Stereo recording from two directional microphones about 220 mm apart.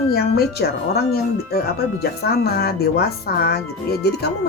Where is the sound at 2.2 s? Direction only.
45° left (ahead or behind).